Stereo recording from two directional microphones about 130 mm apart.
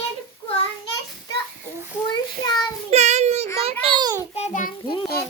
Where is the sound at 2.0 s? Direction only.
30° left (ahead or behind).